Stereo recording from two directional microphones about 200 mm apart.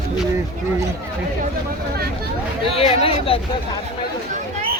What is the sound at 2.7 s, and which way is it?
Speech, 30° left (ahead or behind).